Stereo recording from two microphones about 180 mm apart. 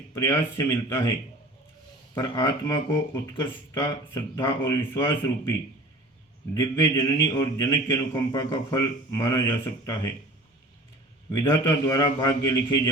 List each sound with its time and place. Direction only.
0.1 s speech: 20° left (ahead or behind)
2.1 s a man's voice: 20° left (ahead or behind)
6.5 s a man's voice: 20° left (ahead or behind)
11.3 s a man's voice: 20° left (ahead or behind)